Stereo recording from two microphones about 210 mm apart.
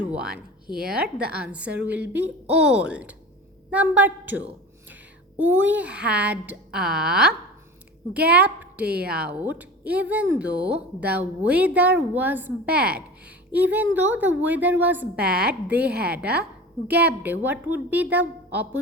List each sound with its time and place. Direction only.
0.1 s speech: 5° right (ahead or behind)
0.7 s speech: 45° right (ahead or behind)
1.3 s a woman's voice: 5° right (ahead or behind)
8.9 s speech: 50° right (ahead or behind)
9.1 s a woman's voice: 10° right (ahead or behind)
16.9 s a woman's voice: 10° right (ahead or behind)